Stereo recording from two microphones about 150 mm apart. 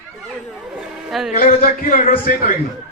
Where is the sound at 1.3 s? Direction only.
60° left (ahead or behind).